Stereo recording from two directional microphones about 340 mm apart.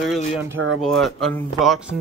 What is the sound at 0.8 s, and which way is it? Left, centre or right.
Speech, centre.